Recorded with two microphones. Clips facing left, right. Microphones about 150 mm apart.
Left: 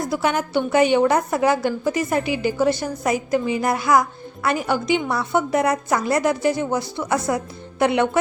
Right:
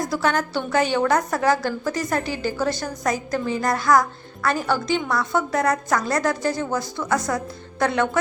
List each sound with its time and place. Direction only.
0.1 s a woman's voice: 15° left (ahead or behind)
1.9 s a woman's voice: 10° left (ahead or behind)
4.4 s a woman's voice: 20° left (ahead or behind)